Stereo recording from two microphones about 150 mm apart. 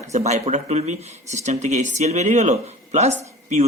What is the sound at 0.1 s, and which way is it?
Speech, 50° right (ahead or behind).